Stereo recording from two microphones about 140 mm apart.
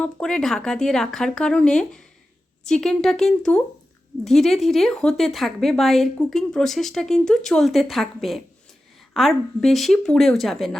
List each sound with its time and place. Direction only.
0.0 s speech: 5° left (ahead or behind)